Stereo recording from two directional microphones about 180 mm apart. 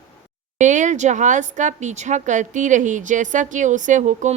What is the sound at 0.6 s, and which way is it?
A woman's voice, 45° right (ahead or behind).